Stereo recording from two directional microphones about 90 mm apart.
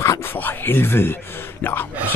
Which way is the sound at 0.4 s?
25° left (ahead or behind).